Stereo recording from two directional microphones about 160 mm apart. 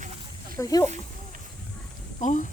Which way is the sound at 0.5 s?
20° left (ahead or behind).